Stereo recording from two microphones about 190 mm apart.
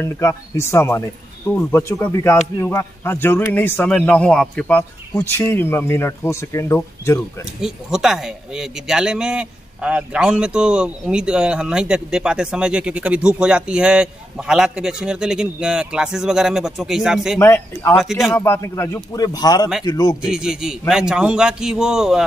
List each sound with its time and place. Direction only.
0.0 s speech: 15° left (ahead or behind)
7.6 s a man's voice: centre (ahead or behind)
17.4 s a man's voice: 10° left (ahead or behind)
20.2 s a man's voice: 5° right (ahead or behind)